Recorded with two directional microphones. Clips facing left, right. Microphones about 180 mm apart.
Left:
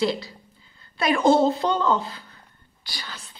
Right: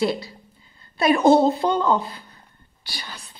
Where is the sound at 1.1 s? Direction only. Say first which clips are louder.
Right 2 dB; 20° right (ahead or behind).